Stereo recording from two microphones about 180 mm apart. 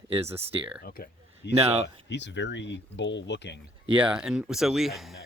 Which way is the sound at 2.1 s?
80° left.